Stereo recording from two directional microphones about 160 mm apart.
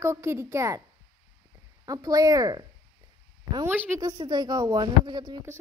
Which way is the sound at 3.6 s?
15° right (ahead or behind).